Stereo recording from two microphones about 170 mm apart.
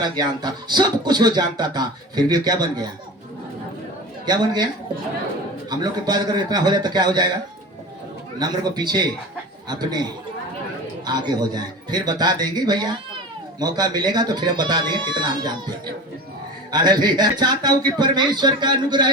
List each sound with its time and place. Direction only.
0.0 s speech: 25° right (ahead or behind)
4.3 s speech: 25° right (ahead or behind)
5.7 s speech: 25° right (ahead or behind)
8.4 s speech: 25° right (ahead or behind)
16.7 s speech: 25° right (ahead or behind)